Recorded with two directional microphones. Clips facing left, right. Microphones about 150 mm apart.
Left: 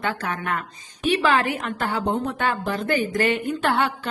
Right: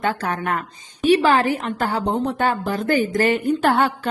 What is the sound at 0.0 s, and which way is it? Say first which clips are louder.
A woman's voice: right 4 dB; 45° right (ahead or behind).